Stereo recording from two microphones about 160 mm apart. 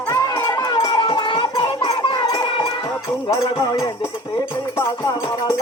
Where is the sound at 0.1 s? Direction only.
20° left (ahead or behind).